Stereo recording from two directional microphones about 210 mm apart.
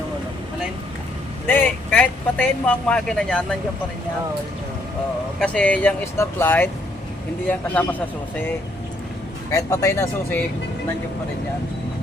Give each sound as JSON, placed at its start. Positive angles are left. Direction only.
{"t": 1.5, "sound": "speech", "side_deg": 10}
{"t": 5.4, "sound": "speech", "side_deg": 5}